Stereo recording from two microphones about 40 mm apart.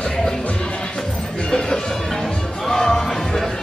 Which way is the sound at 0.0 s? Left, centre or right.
Centre.